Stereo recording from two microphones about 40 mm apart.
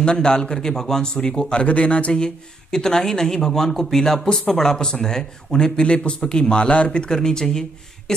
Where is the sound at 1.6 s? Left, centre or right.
Left.